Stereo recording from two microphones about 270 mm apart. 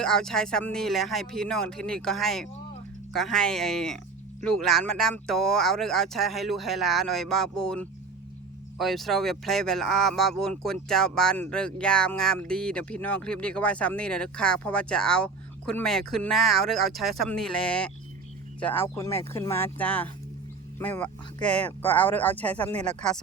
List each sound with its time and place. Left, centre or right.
0.0 s speech: centre